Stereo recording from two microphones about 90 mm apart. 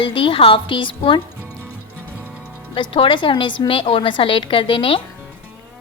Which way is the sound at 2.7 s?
75° left (ahead or behind).